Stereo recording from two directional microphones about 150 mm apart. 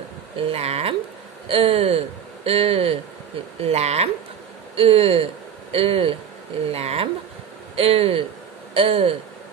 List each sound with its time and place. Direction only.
0.4 s speech: 40° right (ahead or behind)